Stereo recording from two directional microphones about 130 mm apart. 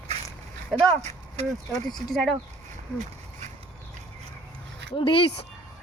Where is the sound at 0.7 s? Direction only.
60° right (ahead or behind).